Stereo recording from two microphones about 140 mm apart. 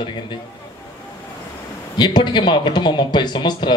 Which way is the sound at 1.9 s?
30° left (ahead or behind).